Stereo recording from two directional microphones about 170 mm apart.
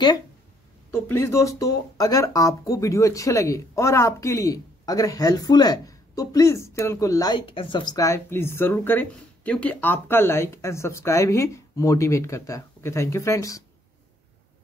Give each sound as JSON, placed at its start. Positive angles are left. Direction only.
{"t": 0.9, "sound": "speech", "side_deg": 15}